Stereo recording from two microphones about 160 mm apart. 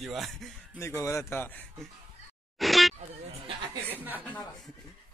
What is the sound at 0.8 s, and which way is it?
Speech, 15° left (ahead or behind).